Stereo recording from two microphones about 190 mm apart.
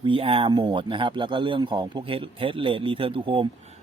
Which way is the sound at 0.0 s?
30° right (ahead or behind).